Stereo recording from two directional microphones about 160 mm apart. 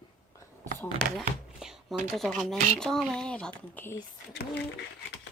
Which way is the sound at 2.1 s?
Centre (ahead or behind).